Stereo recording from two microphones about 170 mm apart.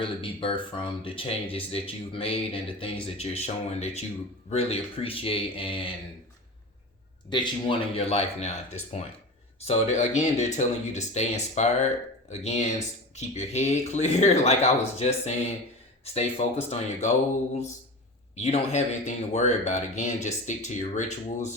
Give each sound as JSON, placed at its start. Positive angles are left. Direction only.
{"t": 0.0, "sound": "speech", "side_deg": 30}
{"t": 7.3, "sound": "speech", "side_deg": 25}
{"t": 18.3, "sound": "speech", "side_deg": 40}